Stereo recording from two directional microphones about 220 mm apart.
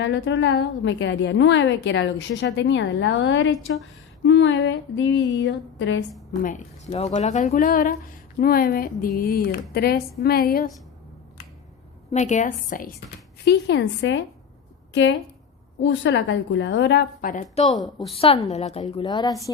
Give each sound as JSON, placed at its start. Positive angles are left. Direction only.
{"t": 0.0, "sound": "a woman's voice", "side_deg": 60}
{"t": 6.4, "sound": "a woman's voice", "side_deg": 35}
{"t": 12.1, "sound": "a woman's voice", "side_deg": 35}
{"t": 13.4, "sound": "speech", "side_deg": 50}
{"t": 15.8, "sound": "speech", "side_deg": 55}